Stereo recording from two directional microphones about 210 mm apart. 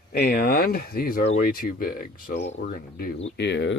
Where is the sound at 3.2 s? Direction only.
60° left (ahead or behind).